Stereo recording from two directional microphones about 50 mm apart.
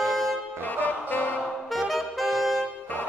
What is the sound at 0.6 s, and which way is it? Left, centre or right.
Music, left.